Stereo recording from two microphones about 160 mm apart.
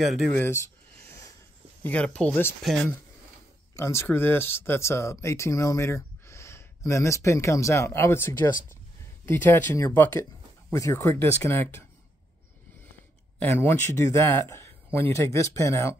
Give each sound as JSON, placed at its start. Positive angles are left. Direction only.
{"t": 0.0, "sound": "speech", "side_deg": 0}
{"t": 0.4, "sound": "a sound", "side_deg": 15}
{"t": 1.8, "sound": "speech", "side_deg": 10}
{"t": 3.7, "sound": "speech", "side_deg": 15}
{"t": 13.4, "sound": "speech", "side_deg": 15}